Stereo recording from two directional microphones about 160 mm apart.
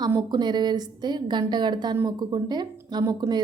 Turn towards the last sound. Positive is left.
turn(degrees=-25)  # may be behind; listen again after turning